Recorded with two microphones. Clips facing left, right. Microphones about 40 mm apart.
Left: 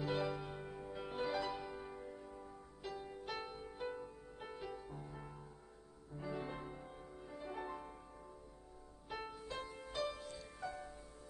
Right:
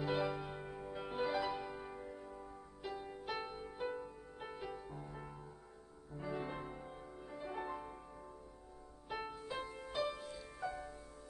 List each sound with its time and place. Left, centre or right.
0.0 s music: centre
9.1 s music: centre
9.6 s music: right
10.2 s music: centre
10.7 s music: right